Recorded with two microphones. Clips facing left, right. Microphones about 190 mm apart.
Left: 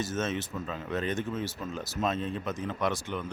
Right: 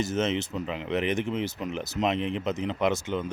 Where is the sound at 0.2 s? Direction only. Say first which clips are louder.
Right 5 dB; 20° right (ahead or behind).